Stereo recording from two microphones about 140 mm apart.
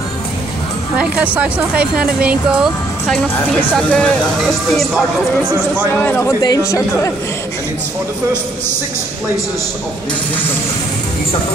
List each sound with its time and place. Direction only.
0.9 s speech: 10° right (ahead or behind)
3.7 s speech: 5° left (ahead or behind)
5.9 s speech: 15° left (ahead or behind)